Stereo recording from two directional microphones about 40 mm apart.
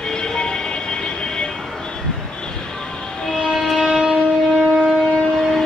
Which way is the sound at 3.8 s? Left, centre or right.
Centre.